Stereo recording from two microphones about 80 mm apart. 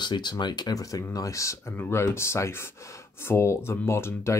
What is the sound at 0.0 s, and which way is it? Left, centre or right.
Speech, left.